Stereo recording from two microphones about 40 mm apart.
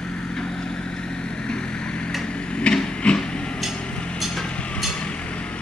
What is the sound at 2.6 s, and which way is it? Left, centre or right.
Train, left.